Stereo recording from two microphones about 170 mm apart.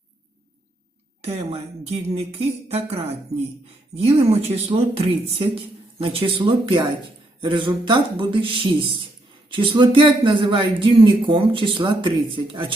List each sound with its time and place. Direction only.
1.2 s speech: 40° right (ahead or behind)